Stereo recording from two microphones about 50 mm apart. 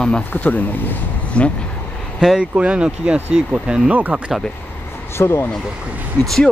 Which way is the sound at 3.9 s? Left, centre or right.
Right.